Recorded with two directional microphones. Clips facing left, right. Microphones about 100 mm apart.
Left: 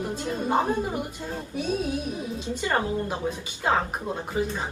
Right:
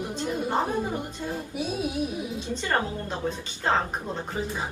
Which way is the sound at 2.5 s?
15° left (ahead or behind).